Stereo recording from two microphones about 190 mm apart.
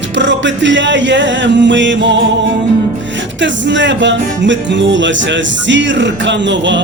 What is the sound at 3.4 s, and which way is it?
Music, 70° right (ahead or behind).